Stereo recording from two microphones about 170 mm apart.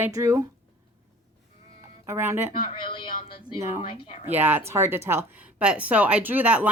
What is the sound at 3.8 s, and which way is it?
Speech, 30° left (ahead or behind).